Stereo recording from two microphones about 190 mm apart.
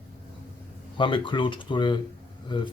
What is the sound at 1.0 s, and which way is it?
Speech, 25° left (ahead or behind).